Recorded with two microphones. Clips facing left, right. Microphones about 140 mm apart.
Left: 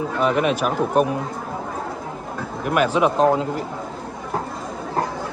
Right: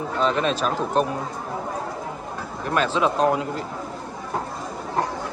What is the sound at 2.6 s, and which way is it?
A man's voice, 15° left (ahead or behind).